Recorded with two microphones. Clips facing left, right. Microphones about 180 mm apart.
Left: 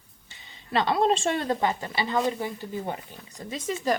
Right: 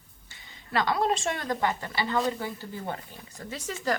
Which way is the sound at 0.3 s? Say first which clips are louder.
Left 4 dB; 25° left (ahead or behind).